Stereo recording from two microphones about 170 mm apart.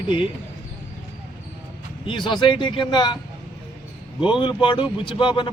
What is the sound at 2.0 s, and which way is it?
Speech, 30° left (ahead or behind).